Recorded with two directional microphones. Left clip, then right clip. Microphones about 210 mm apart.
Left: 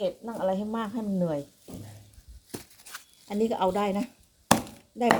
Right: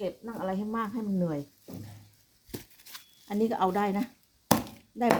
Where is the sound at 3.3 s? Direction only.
30° right (ahead or behind).